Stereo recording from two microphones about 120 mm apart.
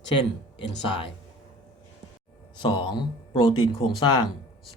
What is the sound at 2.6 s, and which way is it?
Speech, 40° left (ahead or behind).